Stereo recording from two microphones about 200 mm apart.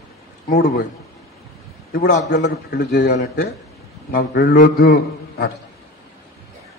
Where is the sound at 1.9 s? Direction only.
45° left (ahead or behind).